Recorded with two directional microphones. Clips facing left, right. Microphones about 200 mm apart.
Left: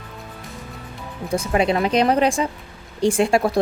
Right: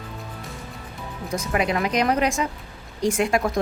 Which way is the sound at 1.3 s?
30° left (ahead or behind).